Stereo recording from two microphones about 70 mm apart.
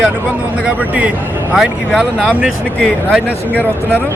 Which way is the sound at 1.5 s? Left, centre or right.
Centre.